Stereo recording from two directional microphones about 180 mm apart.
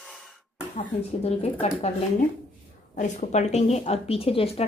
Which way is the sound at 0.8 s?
35° left (ahead or behind).